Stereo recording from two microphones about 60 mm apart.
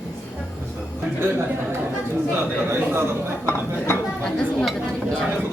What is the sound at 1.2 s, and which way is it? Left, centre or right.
A man's voice, right.